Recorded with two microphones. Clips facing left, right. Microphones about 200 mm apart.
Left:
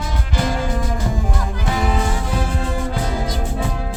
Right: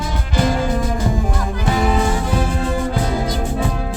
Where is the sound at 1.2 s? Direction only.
50° right (ahead or behind).